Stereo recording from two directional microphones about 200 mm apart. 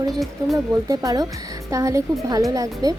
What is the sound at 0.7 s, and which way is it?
Speech, 15° right (ahead or behind).